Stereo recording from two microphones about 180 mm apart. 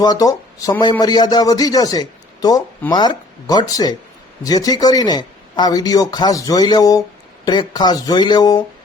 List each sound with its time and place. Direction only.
0.0 s speech: 20° left (ahead or behind)